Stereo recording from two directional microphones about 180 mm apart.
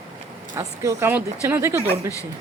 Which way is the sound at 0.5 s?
15° right (ahead or behind).